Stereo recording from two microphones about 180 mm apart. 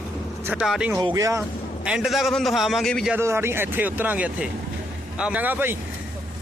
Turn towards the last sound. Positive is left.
turn(degrees=-10)  # may be behind; listen again after turning